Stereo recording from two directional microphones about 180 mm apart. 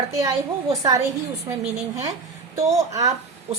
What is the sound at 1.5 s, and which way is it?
A woman's voice, 15° right (ahead or behind).